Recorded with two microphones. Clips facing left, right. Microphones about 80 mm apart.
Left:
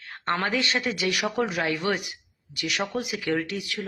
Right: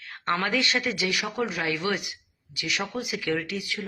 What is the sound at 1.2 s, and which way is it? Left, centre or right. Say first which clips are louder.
Speech: left 3 dB; centre.